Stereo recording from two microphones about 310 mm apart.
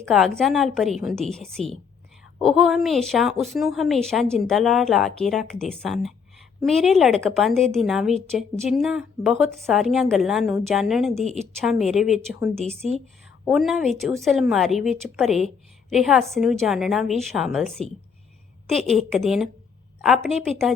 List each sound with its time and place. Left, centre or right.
0.0 s a woman's voice: centre
12.6 s speech: centre
13.4 s a woman's voice: centre